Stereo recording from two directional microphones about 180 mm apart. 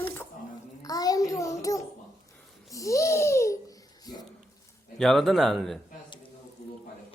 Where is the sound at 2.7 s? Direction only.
15° left (ahead or behind).